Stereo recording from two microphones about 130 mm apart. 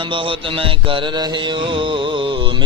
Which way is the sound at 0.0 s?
40° right (ahead or behind).